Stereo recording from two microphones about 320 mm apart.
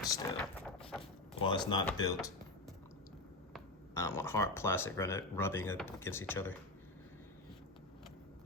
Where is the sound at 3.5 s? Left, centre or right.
Centre.